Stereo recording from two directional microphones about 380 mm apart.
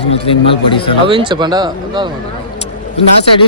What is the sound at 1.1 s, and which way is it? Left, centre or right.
Speech, centre.